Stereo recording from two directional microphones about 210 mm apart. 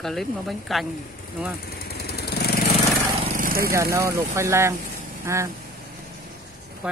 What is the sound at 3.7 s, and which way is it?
Speech, 15° right (ahead or behind).